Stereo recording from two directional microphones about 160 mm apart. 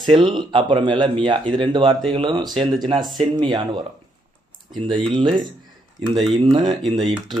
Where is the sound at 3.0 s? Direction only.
Centre (ahead or behind).